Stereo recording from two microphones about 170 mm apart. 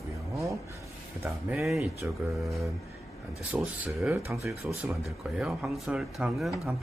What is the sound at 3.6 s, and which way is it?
Speech, centre (ahead or behind).